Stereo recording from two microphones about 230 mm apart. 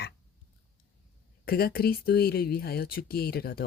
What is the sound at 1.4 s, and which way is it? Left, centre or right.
Speech, left.